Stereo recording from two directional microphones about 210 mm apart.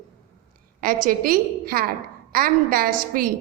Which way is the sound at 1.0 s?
45° right (ahead or behind).